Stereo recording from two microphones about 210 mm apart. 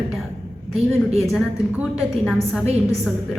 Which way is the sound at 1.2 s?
Centre (ahead or behind).